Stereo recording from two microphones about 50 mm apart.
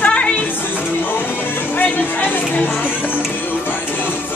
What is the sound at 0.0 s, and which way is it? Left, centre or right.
Music, left.